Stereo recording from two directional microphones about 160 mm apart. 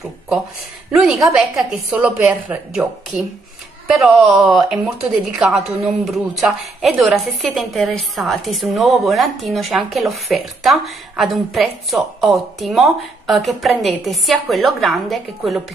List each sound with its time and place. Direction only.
0.9 s a woman's voice: centre (ahead or behind)